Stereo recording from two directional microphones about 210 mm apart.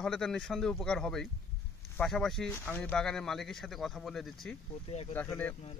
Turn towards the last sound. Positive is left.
turn(degrees=10)  # may be behind; listen again after turning